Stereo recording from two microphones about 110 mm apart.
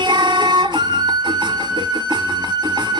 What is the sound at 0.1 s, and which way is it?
Music, 45° right (ahead or behind).